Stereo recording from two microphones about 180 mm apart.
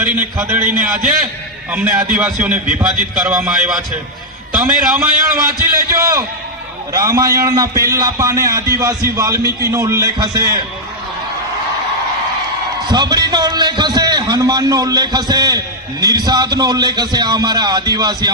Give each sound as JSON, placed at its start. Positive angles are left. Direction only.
{"t": 0.0, "sound": "a man's voice", "side_deg": -10}
{"t": 1.7, "sound": "a man's voice", "side_deg": -10}
{"t": 4.9, "sound": "a man's voice", "side_deg": -10}
{"t": 12.9, "sound": "a man's voice", "side_deg": -25}